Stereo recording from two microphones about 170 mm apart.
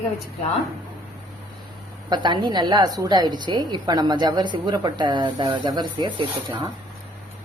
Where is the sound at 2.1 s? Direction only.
25° right (ahead or behind).